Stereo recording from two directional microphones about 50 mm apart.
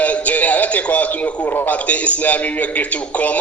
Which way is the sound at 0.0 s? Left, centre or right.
Left.